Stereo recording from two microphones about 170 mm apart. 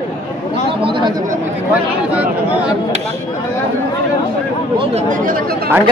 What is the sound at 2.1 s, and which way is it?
Speech, 10° right (ahead or behind).